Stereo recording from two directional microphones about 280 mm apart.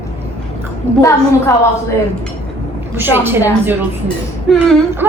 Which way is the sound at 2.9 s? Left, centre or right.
Centre.